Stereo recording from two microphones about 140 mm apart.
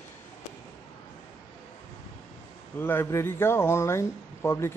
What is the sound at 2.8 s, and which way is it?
Speech, 15° left (ahead or behind).